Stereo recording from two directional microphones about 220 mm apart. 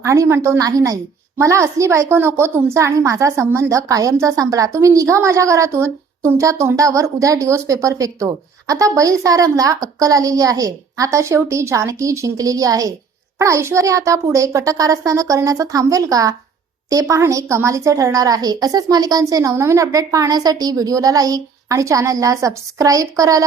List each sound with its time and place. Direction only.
0.0 s a woman's voice: 15° right (ahead or behind)